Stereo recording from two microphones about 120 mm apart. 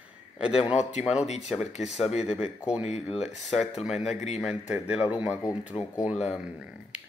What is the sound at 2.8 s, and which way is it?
Mantra, 65° left (ahead or behind).